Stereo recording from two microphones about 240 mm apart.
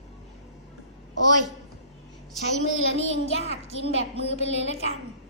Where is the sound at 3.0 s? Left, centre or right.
Left.